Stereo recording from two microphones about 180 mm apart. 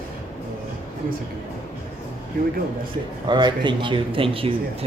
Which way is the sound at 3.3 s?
25° right (ahead or behind).